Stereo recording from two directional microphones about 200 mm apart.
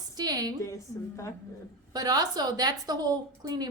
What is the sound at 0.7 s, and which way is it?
Speech, 15° left (ahead or behind).